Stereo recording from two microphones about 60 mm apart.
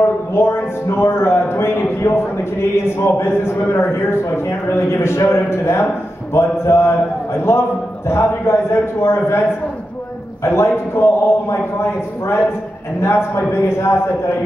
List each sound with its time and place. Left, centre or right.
0.3 s a man's voice: left
10.4 s a man's voice: left